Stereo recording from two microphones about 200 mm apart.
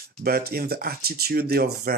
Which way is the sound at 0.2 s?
50° right (ahead or behind).